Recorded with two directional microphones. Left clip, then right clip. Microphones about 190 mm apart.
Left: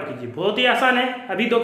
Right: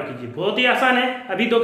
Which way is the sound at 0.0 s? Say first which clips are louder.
Even; 15° left (ahead or behind).